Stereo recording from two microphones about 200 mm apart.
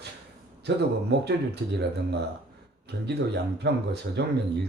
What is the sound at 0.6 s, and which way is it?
Speech, 55° right (ahead or behind).